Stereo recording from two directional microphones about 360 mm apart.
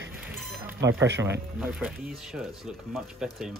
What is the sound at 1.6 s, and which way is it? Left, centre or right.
Speech, centre.